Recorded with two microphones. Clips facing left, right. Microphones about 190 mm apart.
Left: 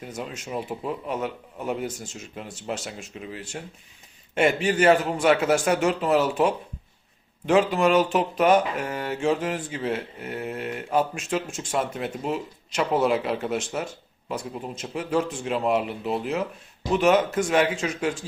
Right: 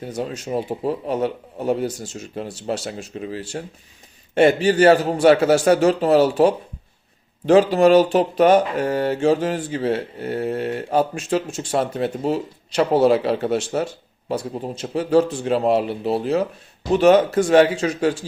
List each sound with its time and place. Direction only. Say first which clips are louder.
0.0 s speech: right 7 dB; 35° right (ahead or behind)